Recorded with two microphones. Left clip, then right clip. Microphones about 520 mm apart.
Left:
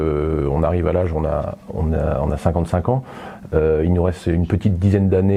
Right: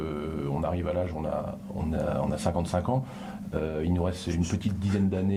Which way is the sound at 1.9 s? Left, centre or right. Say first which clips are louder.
Left 8 dB; left.